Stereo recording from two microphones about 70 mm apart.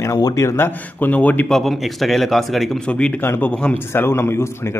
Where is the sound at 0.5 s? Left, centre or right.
Left.